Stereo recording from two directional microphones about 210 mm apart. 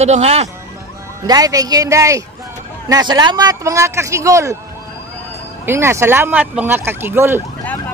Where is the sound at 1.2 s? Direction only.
15° right (ahead or behind).